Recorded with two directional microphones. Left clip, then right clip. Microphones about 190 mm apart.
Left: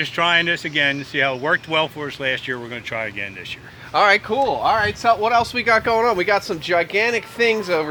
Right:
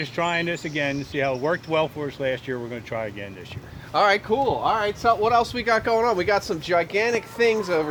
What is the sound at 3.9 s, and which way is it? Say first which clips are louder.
Speech: left 4 dB; 30° left (ahead or behind).